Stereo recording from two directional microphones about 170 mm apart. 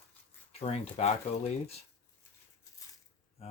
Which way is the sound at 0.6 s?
40° left (ahead or behind).